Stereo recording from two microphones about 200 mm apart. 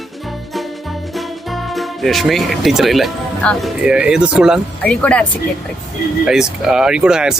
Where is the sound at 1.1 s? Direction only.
Centre (ahead or behind).